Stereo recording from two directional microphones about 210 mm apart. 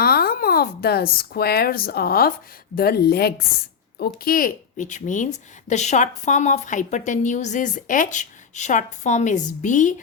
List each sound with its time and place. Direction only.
0.0 s a woman's voice: 45° left (ahead or behind)